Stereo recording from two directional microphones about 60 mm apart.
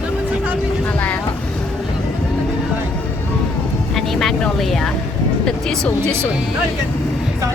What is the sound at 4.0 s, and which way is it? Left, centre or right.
Speech, centre.